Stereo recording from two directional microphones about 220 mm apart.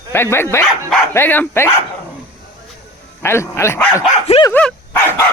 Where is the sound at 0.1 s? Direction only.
10° left (ahead or behind).